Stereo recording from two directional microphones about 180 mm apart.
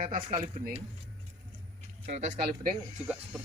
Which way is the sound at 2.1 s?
40° right (ahead or behind).